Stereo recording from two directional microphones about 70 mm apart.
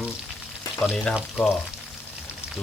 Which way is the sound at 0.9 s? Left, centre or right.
Centre.